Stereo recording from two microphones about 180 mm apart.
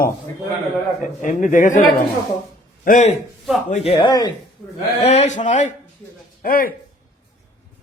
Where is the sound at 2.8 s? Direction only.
45° left (ahead or behind).